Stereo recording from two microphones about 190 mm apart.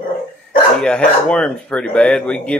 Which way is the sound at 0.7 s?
5° left (ahead or behind).